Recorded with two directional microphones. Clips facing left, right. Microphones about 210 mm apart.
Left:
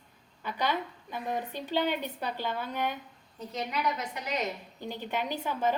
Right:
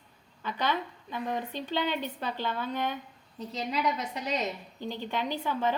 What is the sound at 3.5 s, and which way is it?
Speech, 30° right (ahead or behind).